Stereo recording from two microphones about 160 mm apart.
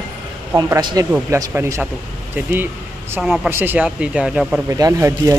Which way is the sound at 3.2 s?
5° right (ahead or behind).